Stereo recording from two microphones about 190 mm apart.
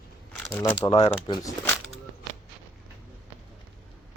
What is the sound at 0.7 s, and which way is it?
Speech, 25° left (ahead or behind).